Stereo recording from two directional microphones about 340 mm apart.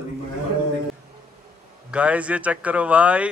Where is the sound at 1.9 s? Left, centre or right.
Centre.